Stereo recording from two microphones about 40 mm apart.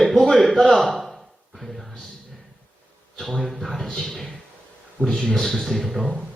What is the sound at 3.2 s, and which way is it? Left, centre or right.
Speech, centre.